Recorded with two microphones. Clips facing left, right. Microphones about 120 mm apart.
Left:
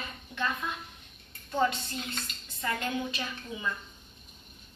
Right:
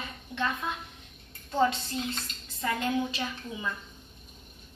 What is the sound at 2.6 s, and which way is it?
A woman's voice, 20° right (ahead or behind).